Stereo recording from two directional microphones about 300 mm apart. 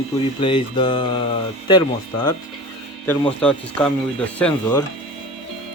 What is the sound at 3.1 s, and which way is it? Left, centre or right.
Speech, centre.